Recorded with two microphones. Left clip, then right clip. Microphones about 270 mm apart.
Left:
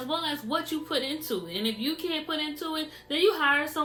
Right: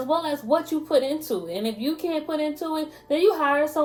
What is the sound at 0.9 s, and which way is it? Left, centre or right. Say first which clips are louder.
A woman's voice: right 9 dB; centre.